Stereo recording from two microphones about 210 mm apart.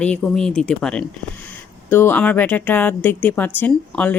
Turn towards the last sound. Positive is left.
turn(degrees=5)  # may be behind; listen again after turning